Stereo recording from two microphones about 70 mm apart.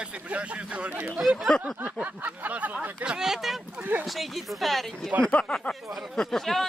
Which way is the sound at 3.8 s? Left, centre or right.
Right.